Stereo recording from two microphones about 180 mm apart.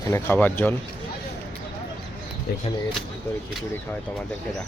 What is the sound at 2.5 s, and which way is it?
Speech, 60° left (ahead or behind).